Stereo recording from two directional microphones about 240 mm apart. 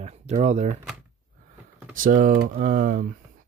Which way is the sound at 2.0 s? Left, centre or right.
Right.